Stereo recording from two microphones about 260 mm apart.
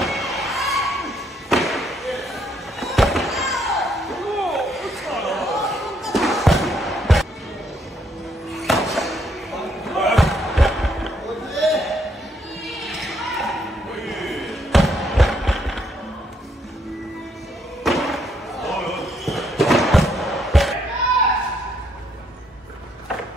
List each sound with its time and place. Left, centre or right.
0.0 s thump: centre
8.5 s slam: centre
12.6 s basketball bounce: centre
17.8 s basketball bounce: centre